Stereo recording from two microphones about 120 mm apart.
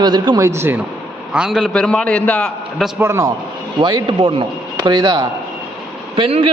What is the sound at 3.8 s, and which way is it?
A man's voice, 40° right (ahead or behind).